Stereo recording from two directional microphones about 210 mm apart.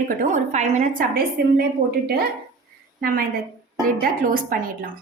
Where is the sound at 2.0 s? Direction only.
50° right (ahead or behind).